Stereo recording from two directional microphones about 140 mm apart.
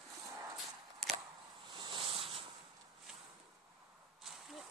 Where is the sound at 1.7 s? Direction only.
35° right (ahead or behind).